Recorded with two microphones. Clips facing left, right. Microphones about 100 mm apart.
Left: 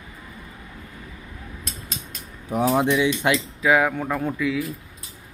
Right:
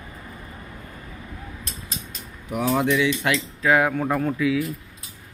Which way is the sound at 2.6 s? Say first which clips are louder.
Left 1 dB; 20° left (ahead or behind).